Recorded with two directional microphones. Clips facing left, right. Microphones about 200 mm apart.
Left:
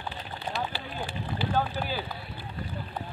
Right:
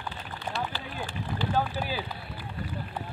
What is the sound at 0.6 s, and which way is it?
Speech, 15° left (ahead or behind).